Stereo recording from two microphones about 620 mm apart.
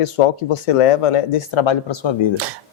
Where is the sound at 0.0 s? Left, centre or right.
Left.